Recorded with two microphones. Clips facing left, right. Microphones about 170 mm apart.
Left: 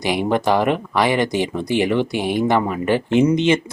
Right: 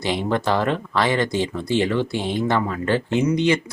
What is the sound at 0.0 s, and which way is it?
Speech, 15° left (ahead or behind).